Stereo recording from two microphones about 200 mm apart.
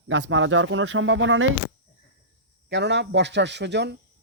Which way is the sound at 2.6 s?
60° right (ahead or behind).